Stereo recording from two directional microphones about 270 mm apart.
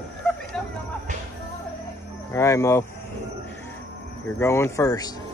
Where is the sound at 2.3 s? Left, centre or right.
Centre.